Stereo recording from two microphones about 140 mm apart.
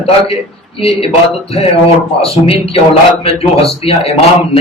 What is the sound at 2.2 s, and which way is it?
Speech, 45° left (ahead or behind).